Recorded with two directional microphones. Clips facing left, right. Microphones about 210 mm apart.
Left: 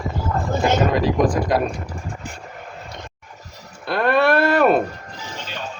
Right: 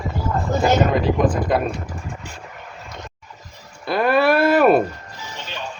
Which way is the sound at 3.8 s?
Centre (ahead or behind).